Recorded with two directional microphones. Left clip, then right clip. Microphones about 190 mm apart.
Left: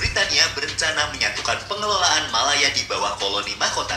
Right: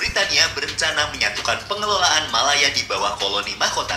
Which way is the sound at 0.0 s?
25° right (ahead or behind).